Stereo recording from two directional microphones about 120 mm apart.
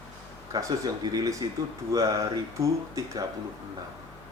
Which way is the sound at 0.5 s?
30° right (ahead or behind).